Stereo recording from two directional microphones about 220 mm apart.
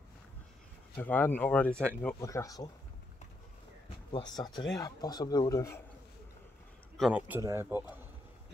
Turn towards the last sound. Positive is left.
turn(degrees=-10)  # may be behind; listen again after turning